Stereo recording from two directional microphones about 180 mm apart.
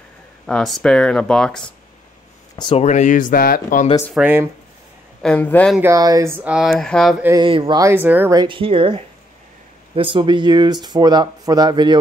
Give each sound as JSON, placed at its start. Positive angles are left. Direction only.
{"t": 0.5, "sound": "speech", "side_deg": 0}
{"t": 2.5, "sound": "speech", "side_deg": 25}
{"t": 2.8, "sound": "speech", "side_deg": 40}
{"t": 4.1, "sound": "speech", "side_deg": -10}
{"t": 5.2, "sound": "speech", "side_deg": 10}
{"t": 5.8, "sound": "speech", "side_deg": -20}
{"t": 7.2, "sound": "speech", "side_deg": -25}
{"t": 7.8, "sound": "speech", "side_deg": -10}
{"t": 8.4, "sound": "speech", "side_deg": -30}